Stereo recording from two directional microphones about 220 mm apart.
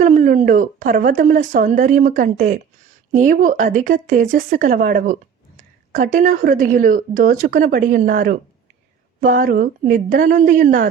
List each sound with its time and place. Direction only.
0.0 s speech: 35° right (ahead or behind)